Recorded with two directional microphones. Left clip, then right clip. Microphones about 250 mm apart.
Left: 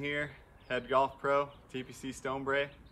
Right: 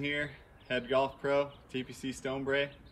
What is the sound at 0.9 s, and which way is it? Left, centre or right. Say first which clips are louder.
Speech: left 1 dB; centre.